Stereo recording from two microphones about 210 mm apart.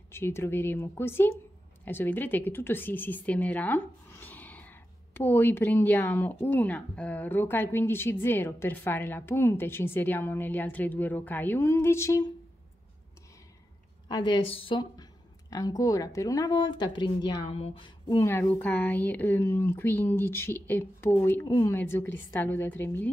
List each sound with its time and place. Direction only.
0.1 s speech: 10° left (ahead or behind)
14.0 s a woman's voice: 20° left (ahead or behind)